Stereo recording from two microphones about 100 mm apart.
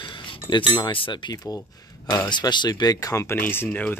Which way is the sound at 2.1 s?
40° left (ahead or behind).